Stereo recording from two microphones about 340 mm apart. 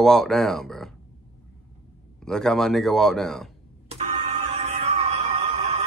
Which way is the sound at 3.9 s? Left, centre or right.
Centre.